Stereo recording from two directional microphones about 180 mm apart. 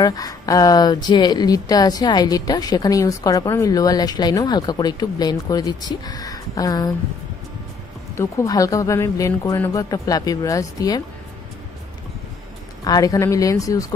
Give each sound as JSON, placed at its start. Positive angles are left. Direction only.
{"t": 0.0, "sound": "speech", "side_deg": 20}
{"t": 8.1, "sound": "speech", "side_deg": 15}
{"t": 12.8, "sound": "speech", "side_deg": 20}